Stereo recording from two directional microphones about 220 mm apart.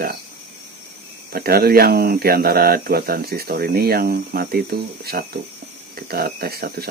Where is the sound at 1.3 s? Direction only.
45° right (ahead or behind).